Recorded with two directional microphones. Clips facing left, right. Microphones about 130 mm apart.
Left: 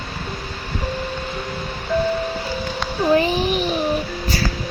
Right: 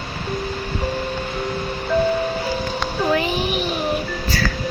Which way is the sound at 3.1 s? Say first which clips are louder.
Left 5 dB; 35° left (ahead or behind).